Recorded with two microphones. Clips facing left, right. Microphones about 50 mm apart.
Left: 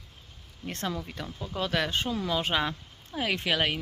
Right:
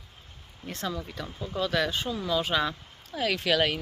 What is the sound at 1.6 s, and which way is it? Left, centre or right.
Speech, left.